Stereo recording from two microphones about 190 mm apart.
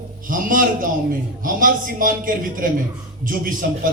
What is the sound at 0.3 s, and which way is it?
A man's voice, 45° right (ahead or behind).